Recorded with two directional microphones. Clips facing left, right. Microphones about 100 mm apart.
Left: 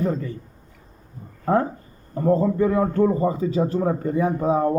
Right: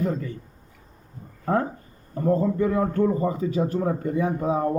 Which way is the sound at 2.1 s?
35° left (ahead or behind).